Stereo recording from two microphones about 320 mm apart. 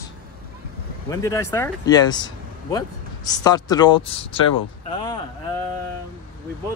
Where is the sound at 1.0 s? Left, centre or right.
Centre.